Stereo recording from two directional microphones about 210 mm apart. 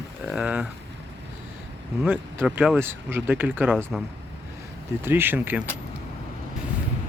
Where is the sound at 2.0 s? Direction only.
5° right (ahead or behind).